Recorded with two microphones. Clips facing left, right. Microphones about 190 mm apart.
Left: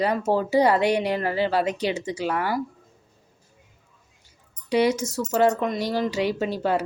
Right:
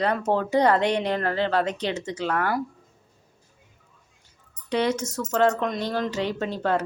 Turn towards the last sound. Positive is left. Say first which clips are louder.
# left 1 dB
turn(degrees=10)  # may be behind; listen again after turning